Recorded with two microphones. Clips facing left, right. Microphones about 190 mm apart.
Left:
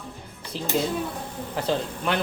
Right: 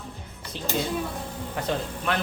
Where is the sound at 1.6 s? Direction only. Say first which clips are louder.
Left 3 dB; 30° left (ahead or behind).